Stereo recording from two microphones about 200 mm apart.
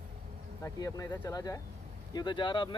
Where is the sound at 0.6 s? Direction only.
15° left (ahead or behind).